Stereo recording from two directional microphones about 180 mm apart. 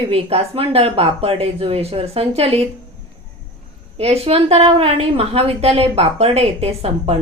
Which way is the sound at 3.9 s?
35° right (ahead or behind).